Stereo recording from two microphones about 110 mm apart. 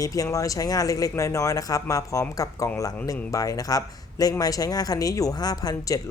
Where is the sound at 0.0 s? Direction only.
30° left (ahead or behind).